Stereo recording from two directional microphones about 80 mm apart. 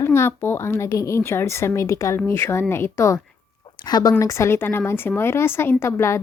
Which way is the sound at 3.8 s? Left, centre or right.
Left.